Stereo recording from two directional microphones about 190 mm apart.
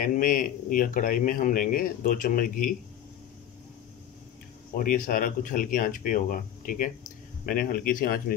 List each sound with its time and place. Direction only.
0.0 s a man's voice: 45° left (ahead or behind)
4.7 s a man's voice: 45° left (ahead or behind)